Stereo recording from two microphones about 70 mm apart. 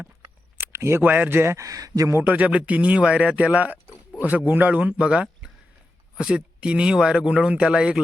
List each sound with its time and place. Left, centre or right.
0.5 s a sound: right
1.0 s speech: right
1.5 s speech: right
2.2 s speech: right